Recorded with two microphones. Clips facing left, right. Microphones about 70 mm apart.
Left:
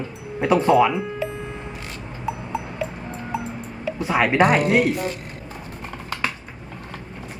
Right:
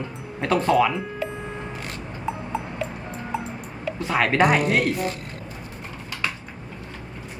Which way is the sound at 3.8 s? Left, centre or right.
Centre.